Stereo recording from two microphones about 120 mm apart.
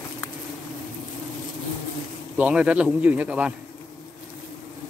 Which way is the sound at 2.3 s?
10° right (ahead or behind).